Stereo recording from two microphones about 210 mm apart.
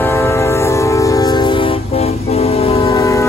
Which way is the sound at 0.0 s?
15° left (ahead or behind).